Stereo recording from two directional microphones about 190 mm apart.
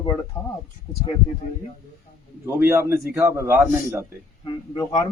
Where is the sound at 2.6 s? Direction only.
15° right (ahead or behind).